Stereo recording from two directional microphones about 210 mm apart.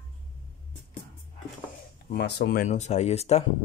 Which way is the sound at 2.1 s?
55° left (ahead or behind).